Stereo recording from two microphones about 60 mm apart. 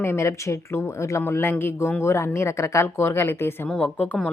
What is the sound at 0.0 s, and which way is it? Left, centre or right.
A woman's voice, left.